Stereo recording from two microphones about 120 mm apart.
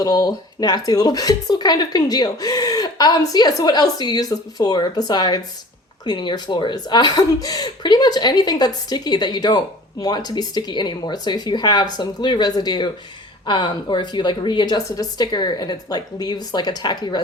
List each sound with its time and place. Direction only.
0.0 s speech: 30° left (ahead or behind)